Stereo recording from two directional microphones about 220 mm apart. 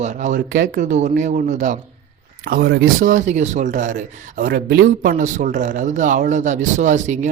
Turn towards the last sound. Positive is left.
turn(degrees=-35)  # may be behind; listen again after turning